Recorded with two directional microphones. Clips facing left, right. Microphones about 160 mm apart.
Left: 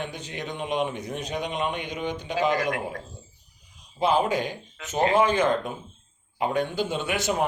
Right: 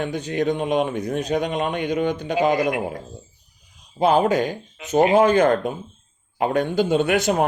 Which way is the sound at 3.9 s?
45° right (ahead or behind).